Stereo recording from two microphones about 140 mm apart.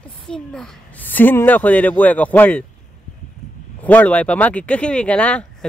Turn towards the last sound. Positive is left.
turn(degrees=10)  # may be behind; listen again after turning